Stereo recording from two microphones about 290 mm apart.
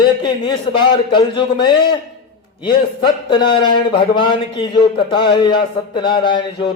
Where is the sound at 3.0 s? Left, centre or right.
Centre.